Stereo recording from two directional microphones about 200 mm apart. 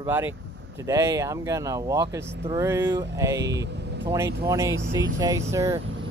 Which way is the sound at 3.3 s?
60° right (ahead or behind).